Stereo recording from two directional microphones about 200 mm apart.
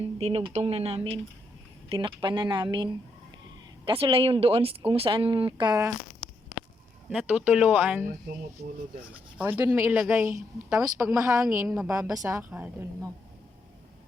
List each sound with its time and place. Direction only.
0.2 s speech: 30° right (ahead or behind)
7.1 s a woman's voice: 5° right (ahead or behind)
9.4 s a woman's voice: 10° right (ahead or behind)